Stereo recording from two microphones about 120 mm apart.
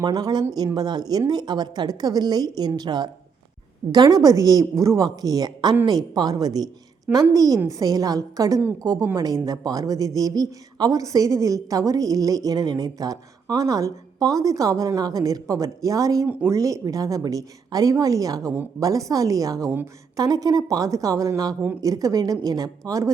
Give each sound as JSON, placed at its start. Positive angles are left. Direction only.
{"t": 0.0, "sound": "a woman's voice", "side_deg": -35}
{"t": 16.2, "sound": "speech", "side_deg": -15}
{"t": 16.5, "sound": "a woman's voice", "side_deg": -25}